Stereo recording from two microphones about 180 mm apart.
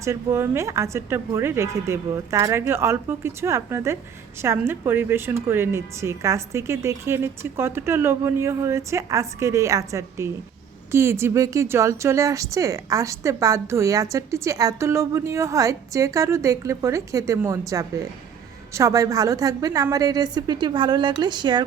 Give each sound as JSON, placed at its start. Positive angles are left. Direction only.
{"t": 0.0, "sound": "a woman's voice", "side_deg": -15}